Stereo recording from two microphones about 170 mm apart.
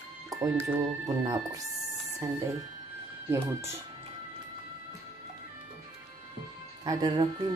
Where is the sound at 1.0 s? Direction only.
20° right (ahead or behind).